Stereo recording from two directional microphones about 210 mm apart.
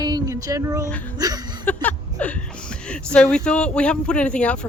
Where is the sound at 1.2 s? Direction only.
20° right (ahead or behind).